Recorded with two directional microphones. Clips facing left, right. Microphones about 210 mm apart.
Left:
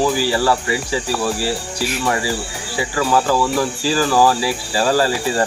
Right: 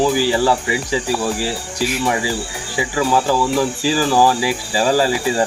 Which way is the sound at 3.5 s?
15° right (ahead or behind).